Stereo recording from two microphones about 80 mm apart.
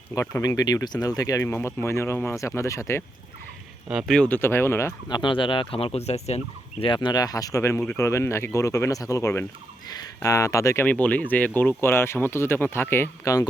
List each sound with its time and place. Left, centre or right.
0.1 s speech: left
0.4 s speech: left
1.4 s speech: left
3.8 s speech: centre
4.3 s speech: left
5.0 s speech: left
6.8 s speech: left
7.2 s speech: left
10.8 s speech: centre
11.8 s speech: left
13.2 s speech: left